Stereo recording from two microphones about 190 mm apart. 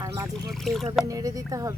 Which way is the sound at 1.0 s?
20° right (ahead or behind).